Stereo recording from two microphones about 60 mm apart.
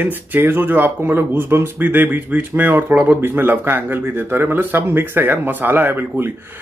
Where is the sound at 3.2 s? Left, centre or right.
Right.